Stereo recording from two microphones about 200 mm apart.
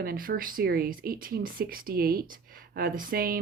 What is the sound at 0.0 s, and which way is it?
Speech, 45° right (ahead or behind).